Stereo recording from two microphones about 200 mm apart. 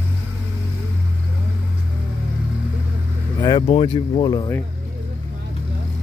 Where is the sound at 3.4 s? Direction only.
25° left (ahead or behind).